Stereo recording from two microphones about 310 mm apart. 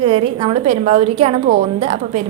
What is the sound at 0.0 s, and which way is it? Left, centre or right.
A woman's voice, centre.